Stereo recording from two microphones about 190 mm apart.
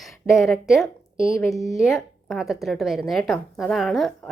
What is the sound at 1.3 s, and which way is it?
Speech, 15° left (ahead or behind).